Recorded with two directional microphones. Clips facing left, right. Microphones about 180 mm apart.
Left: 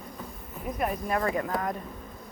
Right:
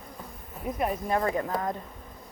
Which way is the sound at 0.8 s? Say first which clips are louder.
Right 1 dB; 25° right (ahead or behind).